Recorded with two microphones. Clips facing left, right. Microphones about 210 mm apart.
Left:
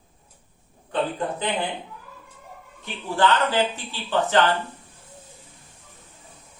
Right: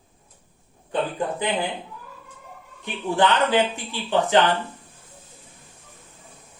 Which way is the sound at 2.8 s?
15° right (ahead or behind).